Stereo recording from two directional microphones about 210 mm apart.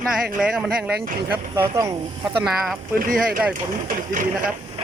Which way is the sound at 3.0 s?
40° right (ahead or behind).